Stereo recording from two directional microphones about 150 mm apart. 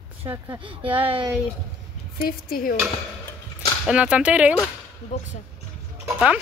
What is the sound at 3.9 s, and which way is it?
Speech, 10° right (ahead or behind).